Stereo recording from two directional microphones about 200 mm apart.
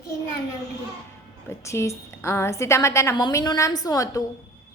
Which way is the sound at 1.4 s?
15° left (ahead or behind).